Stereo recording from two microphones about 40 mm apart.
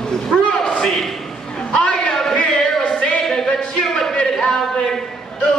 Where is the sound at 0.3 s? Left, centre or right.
Centre.